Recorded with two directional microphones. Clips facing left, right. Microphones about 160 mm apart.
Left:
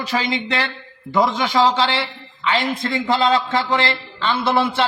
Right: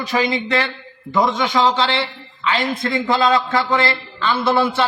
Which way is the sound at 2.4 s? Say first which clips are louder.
Even; 25° left (ahead or behind).